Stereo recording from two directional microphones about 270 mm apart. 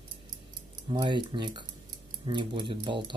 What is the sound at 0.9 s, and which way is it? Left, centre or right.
Speech, centre.